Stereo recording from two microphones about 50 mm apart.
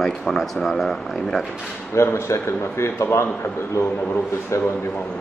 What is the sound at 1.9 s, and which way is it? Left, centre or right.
A man's voice, left.